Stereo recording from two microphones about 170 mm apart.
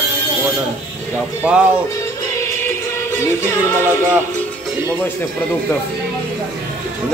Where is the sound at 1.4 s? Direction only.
5° right (ahead or behind).